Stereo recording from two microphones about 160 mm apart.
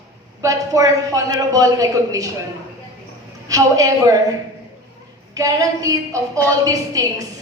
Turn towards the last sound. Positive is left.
turn(degrees=-20)  # may be behind; listen again after turning